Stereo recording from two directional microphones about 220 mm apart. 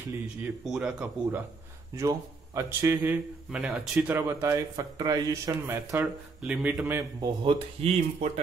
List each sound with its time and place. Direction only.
0.7 s a man's voice: 5° right (ahead or behind); by 8.3 s 25° right (ahead or behind)